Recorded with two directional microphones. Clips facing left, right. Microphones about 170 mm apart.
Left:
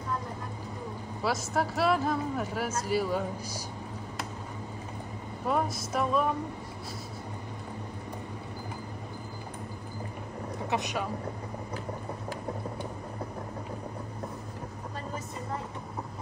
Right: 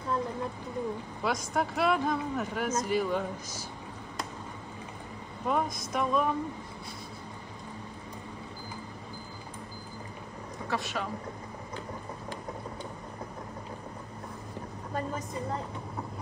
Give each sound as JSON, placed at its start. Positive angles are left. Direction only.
{"t": 1.2, "sound": "speech", "side_deg": 5}
{"t": 5.5, "sound": "speech", "side_deg": 0}
{"t": 10.7, "sound": "speech", "side_deg": 20}